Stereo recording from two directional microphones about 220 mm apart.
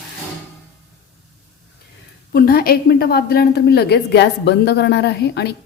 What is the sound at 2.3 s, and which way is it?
A woman's voice, 45° left (ahead or behind).